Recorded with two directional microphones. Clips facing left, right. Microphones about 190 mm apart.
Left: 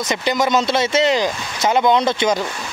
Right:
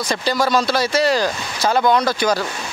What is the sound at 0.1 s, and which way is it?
Speech, 20° left (ahead or behind).